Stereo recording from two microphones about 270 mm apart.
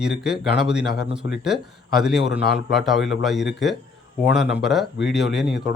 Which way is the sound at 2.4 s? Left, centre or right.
Left.